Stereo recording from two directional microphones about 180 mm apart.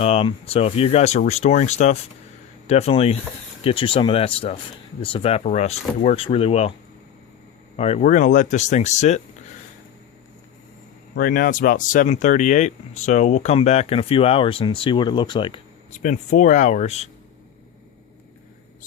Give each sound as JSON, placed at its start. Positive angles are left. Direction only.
{"t": 0.0, "sound": "speech", "side_deg": 30}
{"t": 7.8, "sound": "speech", "side_deg": 40}
{"t": 11.1, "sound": "speech", "side_deg": 50}
{"t": 15.9, "sound": "speech", "side_deg": 45}